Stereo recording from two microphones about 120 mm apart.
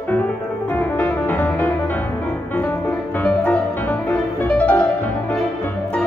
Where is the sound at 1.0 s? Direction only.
15° left (ahead or behind).